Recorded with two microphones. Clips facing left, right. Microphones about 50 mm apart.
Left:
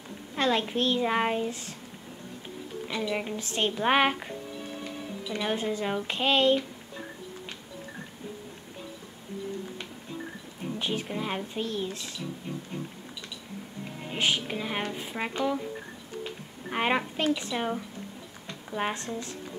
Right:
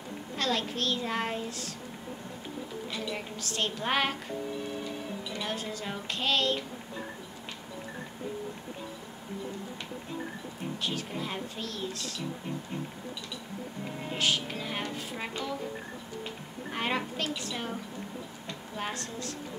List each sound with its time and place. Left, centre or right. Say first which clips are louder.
0.4 s a woman's voice: left 5 dB; left
2.9 s a woman's voice: left 8 dB; left
5.4 s a woman's voice: left 8 dB; left
10.8 s a woman's voice: left 4 dB; left
14.1 s speech: left 2 dB; left
16.7 s a woman's voice: left 5 dB; left
18.8 s a woman's voice: left 5 dB; left